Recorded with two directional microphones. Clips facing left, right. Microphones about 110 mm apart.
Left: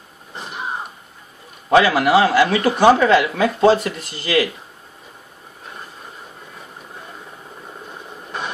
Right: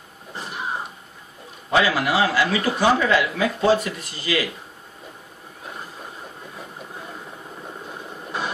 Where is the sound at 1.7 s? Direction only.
65° left (ahead or behind).